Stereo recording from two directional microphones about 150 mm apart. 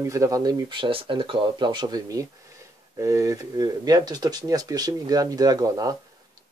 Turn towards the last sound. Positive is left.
turn(degrees=-25)  # may be behind; listen again after turning